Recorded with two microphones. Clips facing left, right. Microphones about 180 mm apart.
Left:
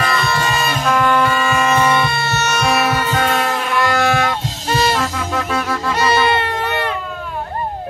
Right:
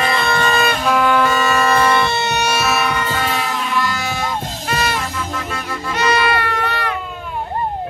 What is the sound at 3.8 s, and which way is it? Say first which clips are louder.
Music: left 6 dB; 60° left (ahead or behind).